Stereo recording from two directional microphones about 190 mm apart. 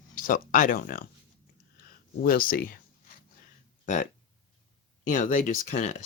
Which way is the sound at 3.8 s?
40° left (ahead or behind).